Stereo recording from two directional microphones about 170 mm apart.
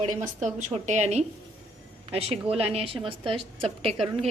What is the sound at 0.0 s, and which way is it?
A woman's voice, 45° right (ahead or behind).